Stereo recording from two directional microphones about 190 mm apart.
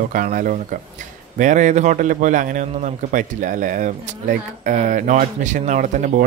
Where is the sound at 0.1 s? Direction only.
45° right (ahead or behind).